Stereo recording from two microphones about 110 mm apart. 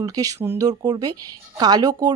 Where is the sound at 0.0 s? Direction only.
35° right (ahead or behind).